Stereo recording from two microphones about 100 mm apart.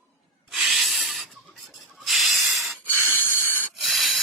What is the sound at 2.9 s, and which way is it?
Snort, 25° right (ahead or behind).